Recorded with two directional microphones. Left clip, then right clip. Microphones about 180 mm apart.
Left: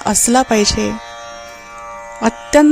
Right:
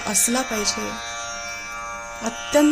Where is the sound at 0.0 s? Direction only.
55° left (ahead or behind).